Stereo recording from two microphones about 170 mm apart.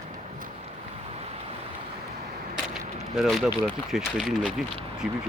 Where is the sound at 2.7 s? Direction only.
Centre (ahead or behind).